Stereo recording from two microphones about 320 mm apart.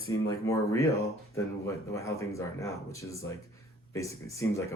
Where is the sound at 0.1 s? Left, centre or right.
Centre.